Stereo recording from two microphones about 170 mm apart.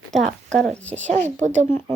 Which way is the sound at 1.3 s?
45° right (ahead or behind).